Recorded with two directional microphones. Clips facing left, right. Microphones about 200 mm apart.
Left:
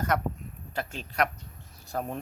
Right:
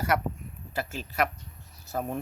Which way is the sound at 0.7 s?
5° right (ahead or behind).